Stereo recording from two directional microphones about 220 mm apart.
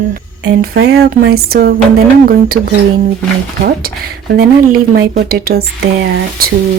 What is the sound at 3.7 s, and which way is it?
Speech, 45° right (ahead or behind).